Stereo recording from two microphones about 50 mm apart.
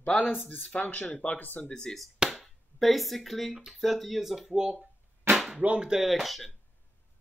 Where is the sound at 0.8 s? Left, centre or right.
Left.